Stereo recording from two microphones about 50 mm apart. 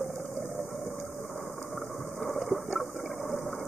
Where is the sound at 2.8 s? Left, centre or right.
Left.